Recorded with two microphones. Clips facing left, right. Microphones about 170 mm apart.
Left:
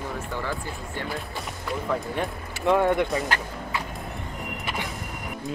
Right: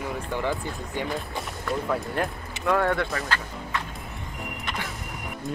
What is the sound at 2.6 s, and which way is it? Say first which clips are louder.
Speech: left 3 dB; 20° left (ahead or behind).